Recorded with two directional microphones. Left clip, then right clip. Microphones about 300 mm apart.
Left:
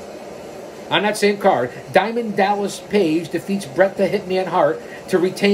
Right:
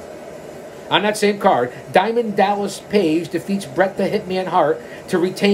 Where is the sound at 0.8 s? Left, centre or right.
Centre.